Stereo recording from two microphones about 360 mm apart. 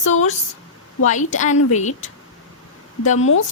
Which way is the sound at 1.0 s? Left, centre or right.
Centre.